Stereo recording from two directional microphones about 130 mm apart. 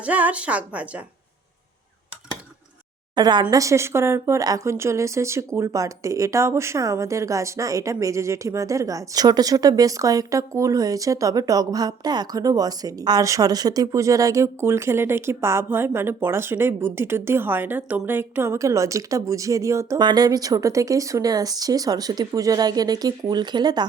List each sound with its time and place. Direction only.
0.0 s a woman's voice: 10° right (ahead or behind)
3.2 s speech: 35° right (ahead or behind)